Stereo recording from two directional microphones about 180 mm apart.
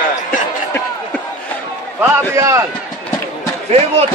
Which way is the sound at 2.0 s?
15° right (ahead or behind).